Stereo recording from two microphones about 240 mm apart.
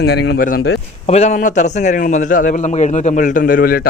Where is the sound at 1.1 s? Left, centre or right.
Left.